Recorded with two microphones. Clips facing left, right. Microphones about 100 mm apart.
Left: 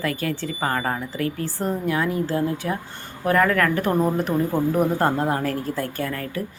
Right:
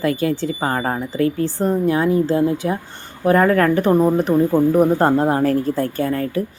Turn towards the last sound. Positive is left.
turn(degrees=-30)  # may be behind; listen again after turning